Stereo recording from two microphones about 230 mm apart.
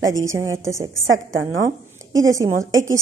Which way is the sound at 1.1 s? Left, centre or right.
Right.